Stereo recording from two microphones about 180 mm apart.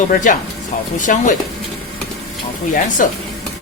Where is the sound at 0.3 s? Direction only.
50° left (ahead or behind).